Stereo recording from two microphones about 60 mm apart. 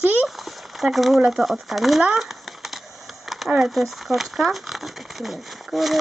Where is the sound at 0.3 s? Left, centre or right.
Centre.